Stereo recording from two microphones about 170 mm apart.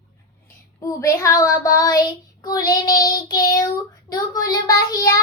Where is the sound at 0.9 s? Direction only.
20° left (ahead or behind).